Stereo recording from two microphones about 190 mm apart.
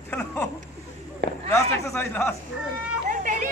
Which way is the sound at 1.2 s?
60° right (ahead or behind).